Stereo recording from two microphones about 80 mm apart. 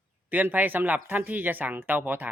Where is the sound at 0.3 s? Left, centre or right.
Right.